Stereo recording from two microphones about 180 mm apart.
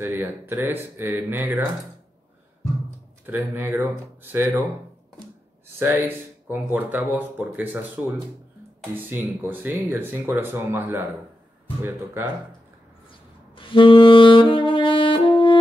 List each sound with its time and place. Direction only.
0.0 s speech: 10° right (ahead or behind)
3.3 s speech: 10° right (ahead or behind)
5.8 s speech: 10° right (ahead or behind)
9.5 s speech: 10° right (ahead or behind)
13.6 s saxophone: 30° left (ahead or behind)